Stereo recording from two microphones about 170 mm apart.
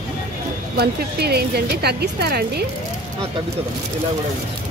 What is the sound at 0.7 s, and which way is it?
A woman's voice, 70° right (ahead or behind).